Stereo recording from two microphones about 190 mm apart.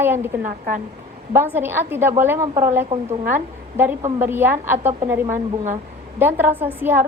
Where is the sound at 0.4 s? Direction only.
45° right (ahead or behind).